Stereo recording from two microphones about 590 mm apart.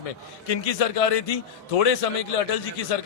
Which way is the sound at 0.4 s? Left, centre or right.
Left.